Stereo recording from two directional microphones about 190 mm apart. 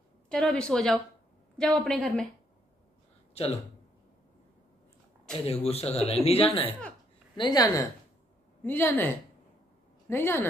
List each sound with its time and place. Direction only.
0.3 s speech: 5° left (ahead or behind)
5.3 s a woman's voice: 30° left (ahead or behind); by 10.4 s 10° left (ahead or behind)